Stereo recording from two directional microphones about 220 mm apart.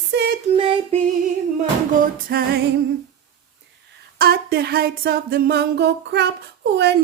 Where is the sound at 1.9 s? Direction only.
40° right (ahead or behind).